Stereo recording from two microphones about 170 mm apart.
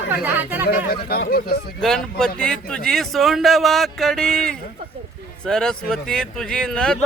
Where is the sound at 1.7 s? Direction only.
5° left (ahead or behind).